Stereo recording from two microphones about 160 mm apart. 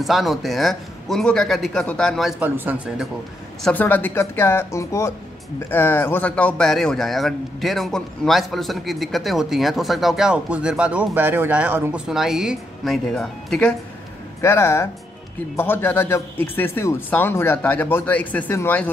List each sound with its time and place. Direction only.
0.0 s a man's voice: centre (ahead or behind)
2.4 s speech: 10° right (ahead or behind)
3.6 s a man's voice: 10° left (ahead or behind)
14.4 s a man's voice: 15° left (ahead or behind)